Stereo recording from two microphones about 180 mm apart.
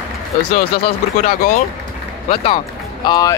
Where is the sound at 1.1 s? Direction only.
45° left (ahead or behind).